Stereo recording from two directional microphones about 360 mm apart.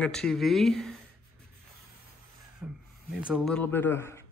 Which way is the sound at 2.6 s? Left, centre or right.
Centre.